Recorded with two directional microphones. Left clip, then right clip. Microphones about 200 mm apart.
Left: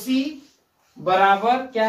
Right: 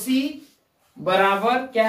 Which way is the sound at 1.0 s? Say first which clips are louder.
Left 2 dB; 10° left (ahead or behind).